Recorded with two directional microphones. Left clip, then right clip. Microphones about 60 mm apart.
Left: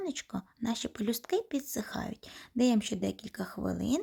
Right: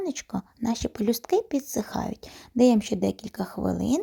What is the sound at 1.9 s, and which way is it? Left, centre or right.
Speech, right.